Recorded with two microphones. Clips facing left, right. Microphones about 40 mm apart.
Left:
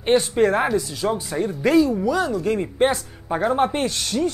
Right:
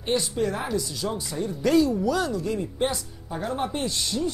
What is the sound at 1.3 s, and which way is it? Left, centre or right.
Speech, left.